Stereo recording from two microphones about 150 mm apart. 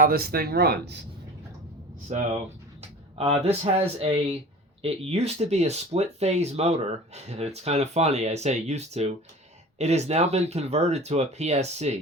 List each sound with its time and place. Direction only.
0.0 s speech: 85° right
2.1 s speech: 55° right (ahead or behind)